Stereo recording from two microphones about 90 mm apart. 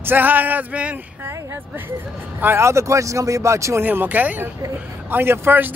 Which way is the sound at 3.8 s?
20° right (ahead or behind).